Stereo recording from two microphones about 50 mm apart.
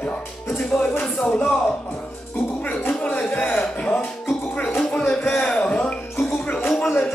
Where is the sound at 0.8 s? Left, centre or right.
Centre.